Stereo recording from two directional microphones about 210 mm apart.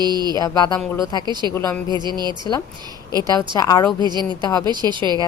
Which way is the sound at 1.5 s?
10° left (ahead or behind).